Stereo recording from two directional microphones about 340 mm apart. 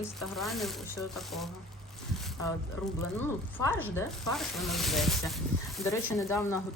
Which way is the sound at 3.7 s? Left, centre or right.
Centre.